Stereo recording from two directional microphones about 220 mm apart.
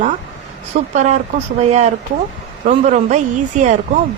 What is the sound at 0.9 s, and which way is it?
Speech, 30° right (ahead or behind).